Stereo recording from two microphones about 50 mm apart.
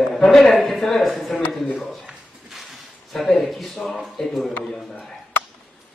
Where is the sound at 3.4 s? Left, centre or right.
Centre.